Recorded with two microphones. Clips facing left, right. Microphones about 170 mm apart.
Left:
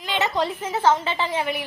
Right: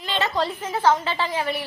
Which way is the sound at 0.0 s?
15° left (ahead or behind).